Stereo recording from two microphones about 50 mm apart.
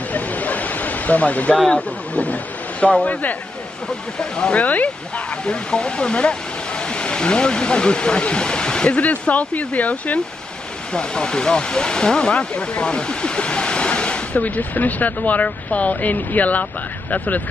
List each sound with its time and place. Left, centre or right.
0.1 s a sound: left
1.7 s speech: left
4.2 s speech: centre
4.6 s speech: left
10.9 s speech: centre